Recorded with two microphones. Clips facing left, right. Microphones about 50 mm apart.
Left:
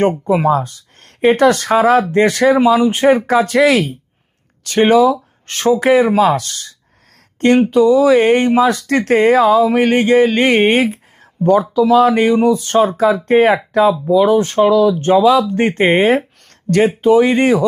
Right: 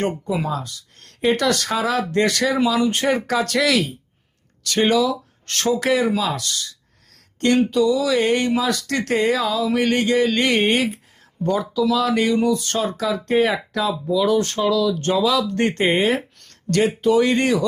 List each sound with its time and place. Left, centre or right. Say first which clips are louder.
0.3 s speech: left 10 dB; left
5.5 s speech: left 7 dB; centre
14.6 s speech: left 8 dB; left
16.9 s speech: left 6 dB; left